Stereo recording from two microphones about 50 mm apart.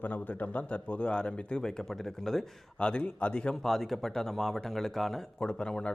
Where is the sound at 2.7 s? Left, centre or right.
Left.